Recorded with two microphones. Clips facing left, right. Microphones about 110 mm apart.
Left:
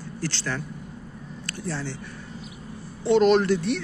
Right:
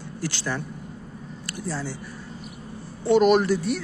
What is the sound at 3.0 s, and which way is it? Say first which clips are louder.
Speech: even; 5° right (ahead or behind).